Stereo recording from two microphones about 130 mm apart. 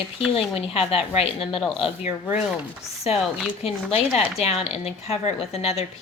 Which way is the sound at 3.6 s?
50° left (ahead or behind).